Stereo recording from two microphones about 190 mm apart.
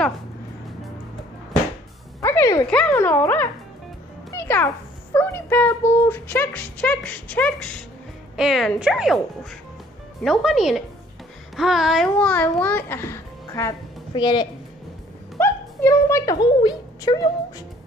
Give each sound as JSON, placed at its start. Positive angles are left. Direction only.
{"t": 2.2, "sound": "a sound", "side_deg": 15}
{"t": 2.7, "sound": "a child's voice", "side_deg": 10}
{"t": 10.2, "sound": "a woman's voice", "side_deg": 0}